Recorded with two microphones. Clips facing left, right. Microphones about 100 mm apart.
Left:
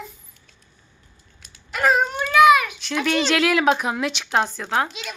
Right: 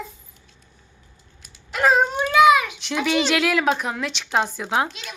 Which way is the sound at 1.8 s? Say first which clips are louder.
Right 1 dB; 20° right (ahead or behind).